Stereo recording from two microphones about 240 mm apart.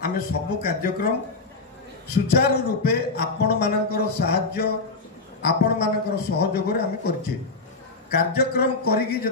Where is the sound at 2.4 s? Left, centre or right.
Left.